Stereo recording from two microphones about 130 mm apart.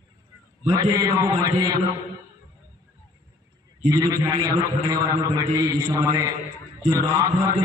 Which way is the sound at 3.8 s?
30° right (ahead or behind).